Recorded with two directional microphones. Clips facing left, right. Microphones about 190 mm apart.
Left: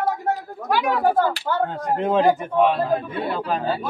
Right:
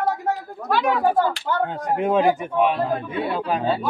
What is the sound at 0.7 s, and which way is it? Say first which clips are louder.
Speech: even; 15° left (ahead or behind).